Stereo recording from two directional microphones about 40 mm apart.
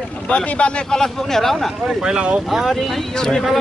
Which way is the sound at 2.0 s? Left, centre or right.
Right.